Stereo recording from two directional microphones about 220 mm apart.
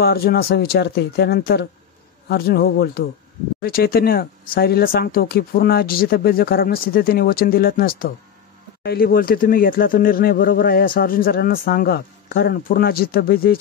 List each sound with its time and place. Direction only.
0.0 s speech: 45° left (ahead or behind)